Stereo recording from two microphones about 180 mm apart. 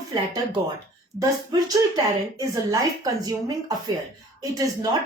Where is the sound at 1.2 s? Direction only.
20° right (ahead or behind).